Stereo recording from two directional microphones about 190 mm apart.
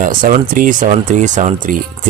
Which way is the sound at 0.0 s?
45° right (ahead or behind).